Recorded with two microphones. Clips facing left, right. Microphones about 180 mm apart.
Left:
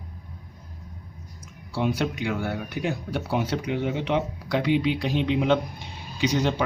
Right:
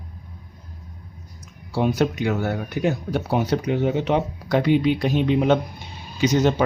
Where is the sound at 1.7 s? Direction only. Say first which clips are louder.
Right 5 dB; 45° right (ahead or behind).